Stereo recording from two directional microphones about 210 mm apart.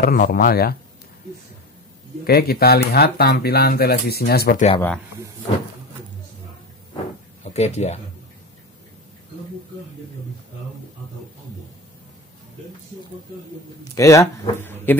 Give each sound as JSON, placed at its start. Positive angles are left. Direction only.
{"t": 0.0, "sound": "speech", "side_deg": 45}
{"t": 2.2, "sound": "speech", "side_deg": 45}
{"t": 7.4, "sound": "speech", "side_deg": 30}
{"t": 13.9, "sound": "speech", "side_deg": 15}